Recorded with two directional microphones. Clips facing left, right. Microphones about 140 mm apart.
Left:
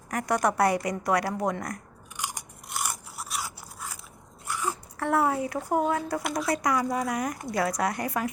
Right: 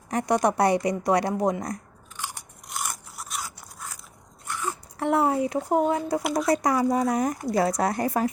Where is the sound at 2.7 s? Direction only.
Centre (ahead or behind).